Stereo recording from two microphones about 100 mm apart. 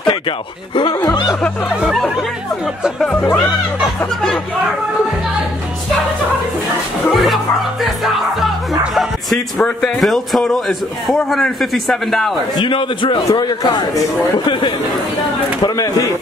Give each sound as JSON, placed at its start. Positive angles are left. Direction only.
{"t": 1.0, "sound": "speech", "side_deg": 40}
{"t": 2.8, "sound": "a man's voice", "side_deg": 5}
{"t": 3.2, "sound": "speech", "side_deg": 20}
{"t": 7.8, "sound": "a man's voice", "side_deg": 0}
{"t": 12.5, "sound": "a man's voice", "side_deg": 55}
{"t": 13.3, "sound": "a man's voice", "side_deg": 40}
{"t": 15.6, "sound": "speech", "side_deg": 35}